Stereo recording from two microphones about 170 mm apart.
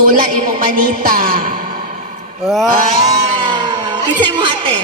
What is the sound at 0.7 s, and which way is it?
Speech, 55° right (ahead or behind).